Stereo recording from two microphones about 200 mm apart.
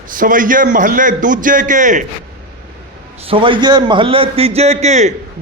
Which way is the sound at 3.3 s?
25° right (ahead or behind).